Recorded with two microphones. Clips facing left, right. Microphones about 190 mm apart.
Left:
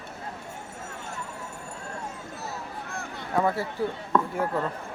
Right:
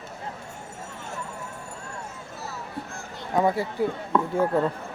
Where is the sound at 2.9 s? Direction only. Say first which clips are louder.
Left 2 dB; 60° left (ahead or behind).